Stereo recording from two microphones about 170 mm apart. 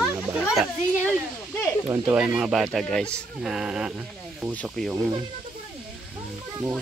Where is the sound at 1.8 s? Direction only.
15° right (ahead or behind).